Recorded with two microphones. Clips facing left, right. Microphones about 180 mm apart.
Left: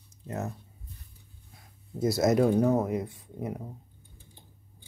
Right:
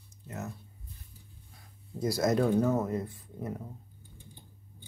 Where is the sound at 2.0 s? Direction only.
20° left (ahead or behind).